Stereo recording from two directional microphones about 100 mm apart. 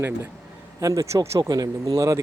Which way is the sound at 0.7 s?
35° right (ahead or behind).